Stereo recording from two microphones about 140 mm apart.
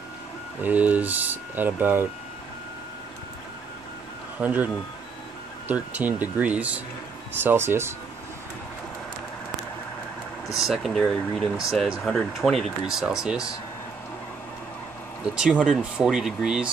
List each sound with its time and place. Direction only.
0.6 s speech: 10° right (ahead or behind)
4.4 s speech: 10° right (ahead or behind)
5.7 s speech: 10° right (ahead or behind)
10.5 s speech: centre (ahead or behind)
15.3 s speech: 5° right (ahead or behind)